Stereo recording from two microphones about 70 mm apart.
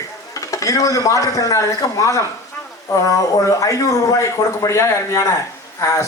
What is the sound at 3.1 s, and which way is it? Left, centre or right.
Speech, left.